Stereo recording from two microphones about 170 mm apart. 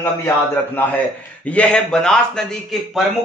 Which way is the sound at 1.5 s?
5° left (ahead or behind).